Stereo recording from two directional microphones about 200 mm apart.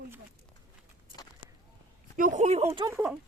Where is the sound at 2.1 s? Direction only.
40° right (ahead or behind).